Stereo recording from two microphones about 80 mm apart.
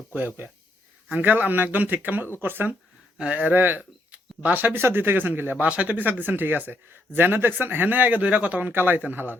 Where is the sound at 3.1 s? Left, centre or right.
Centre.